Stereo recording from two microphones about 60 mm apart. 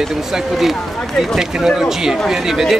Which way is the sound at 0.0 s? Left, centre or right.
Centre.